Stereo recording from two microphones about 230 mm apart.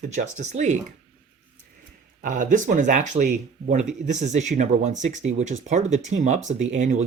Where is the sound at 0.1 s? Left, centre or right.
Right.